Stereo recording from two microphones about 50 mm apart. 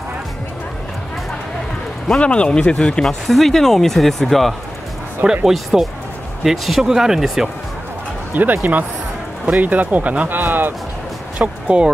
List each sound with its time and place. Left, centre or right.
2.0 s speech: left; by 4.6 s centre
5.2 s speech: centre
5.5 s speech: centre
8.3 s speech: right
11.3 s speech: right